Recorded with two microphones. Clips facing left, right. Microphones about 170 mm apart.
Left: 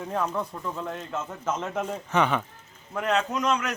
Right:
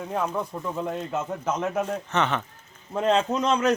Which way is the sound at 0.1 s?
10° right (ahead or behind).